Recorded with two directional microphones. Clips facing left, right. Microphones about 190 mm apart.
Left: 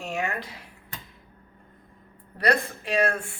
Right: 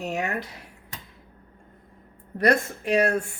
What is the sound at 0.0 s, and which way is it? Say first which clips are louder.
Speech: right 2 dB; 40° right (ahead or behind).